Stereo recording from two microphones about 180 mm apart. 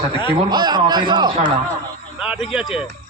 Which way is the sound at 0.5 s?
25° right (ahead or behind).